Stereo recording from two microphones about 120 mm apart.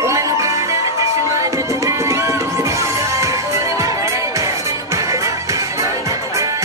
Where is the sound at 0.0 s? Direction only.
25° right (ahead or behind).